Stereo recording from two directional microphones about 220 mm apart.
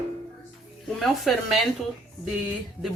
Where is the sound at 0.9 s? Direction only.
Centre (ahead or behind).